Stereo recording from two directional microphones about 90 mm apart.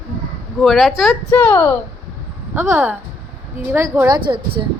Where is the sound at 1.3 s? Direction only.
20° left (ahead or behind).